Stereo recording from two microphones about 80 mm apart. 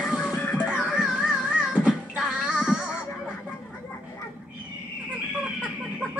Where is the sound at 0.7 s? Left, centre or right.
Centre.